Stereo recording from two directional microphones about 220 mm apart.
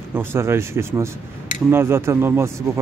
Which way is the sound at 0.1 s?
10° right (ahead or behind).